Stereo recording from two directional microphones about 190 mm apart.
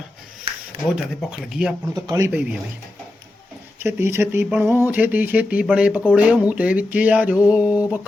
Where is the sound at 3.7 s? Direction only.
10° right (ahead or behind).